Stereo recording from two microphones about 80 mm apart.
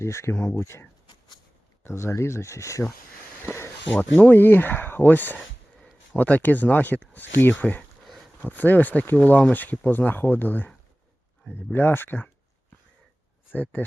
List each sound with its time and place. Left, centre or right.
0.0 s speech: left
3.4 s a sound: left
4.2 s speech: left
8.0 s a sound: centre
8.4 s speech: left
11.7 s speech: left
13.5 s speech: left